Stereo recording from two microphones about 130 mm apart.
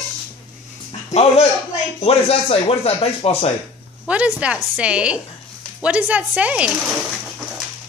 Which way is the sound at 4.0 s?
10° right (ahead or behind).